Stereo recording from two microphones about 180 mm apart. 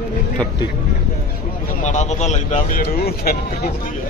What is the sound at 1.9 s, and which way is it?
Speech, 40° left (ahead or behind).